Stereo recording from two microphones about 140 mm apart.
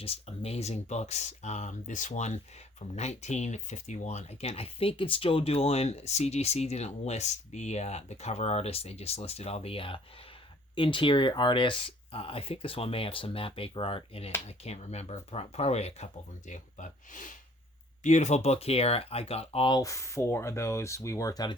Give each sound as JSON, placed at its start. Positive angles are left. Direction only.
{"t": 0.0, "sound": "speech", "side_deg": 45}
{"t": 16.5, "sound": "speech", "side_deg": 60}
{"t": 18.0, "sound": "speech", "side_deg": 60}
{"t": 19.7, "sound": "speech", "side_deg": 25}